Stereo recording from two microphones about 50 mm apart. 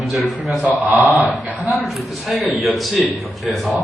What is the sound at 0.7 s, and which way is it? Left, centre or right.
Speech, right.